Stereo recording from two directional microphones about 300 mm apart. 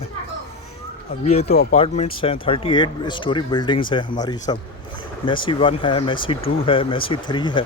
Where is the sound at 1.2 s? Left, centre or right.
Left.